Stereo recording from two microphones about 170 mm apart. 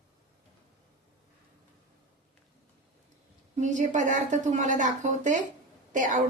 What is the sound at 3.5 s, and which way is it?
A woman's voice, 45° right (ahead or behind).